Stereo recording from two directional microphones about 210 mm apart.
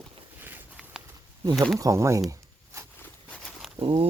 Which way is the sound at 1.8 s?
15° right (ahead or behind).